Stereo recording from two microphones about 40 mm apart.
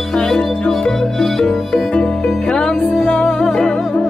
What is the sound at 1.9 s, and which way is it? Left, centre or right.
Music, left.